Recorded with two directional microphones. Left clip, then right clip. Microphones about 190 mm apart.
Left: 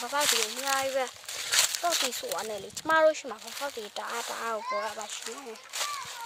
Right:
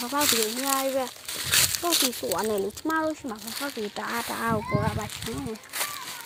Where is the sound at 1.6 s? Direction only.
25° right (ahead or behind).